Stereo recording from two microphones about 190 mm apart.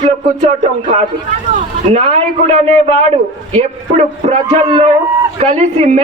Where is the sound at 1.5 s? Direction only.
35° right (ahead or behind).